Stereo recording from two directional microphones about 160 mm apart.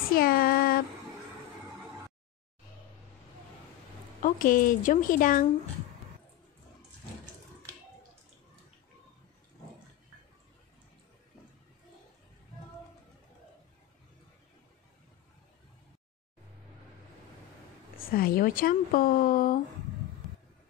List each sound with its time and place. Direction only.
0.1 s a sound: 65° left (ahead or behind)
4.2 s speech: 60° left (ahead or behind)
17.9 s speech: 65° left (ahead or behind)